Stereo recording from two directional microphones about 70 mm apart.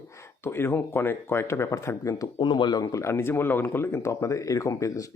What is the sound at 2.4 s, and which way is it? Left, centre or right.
Speech, left.